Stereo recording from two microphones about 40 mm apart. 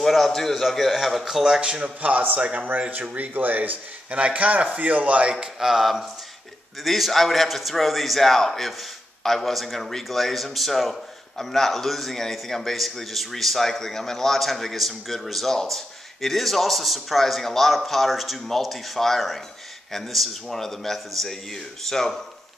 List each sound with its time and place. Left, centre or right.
0.0 s a man's voice: centre
1.2 s speech: centre
2.0 s a man's voice: right
4.1 s a man's voice: right
5.4 s speech: centre
6.8 s a man's voice: centre